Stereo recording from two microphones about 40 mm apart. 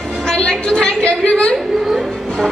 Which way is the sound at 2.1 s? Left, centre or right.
Centre.